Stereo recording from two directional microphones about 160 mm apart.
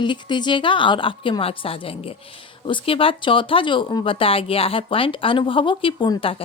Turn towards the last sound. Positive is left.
turn(degrees=35)  # may be behind; listen again after turning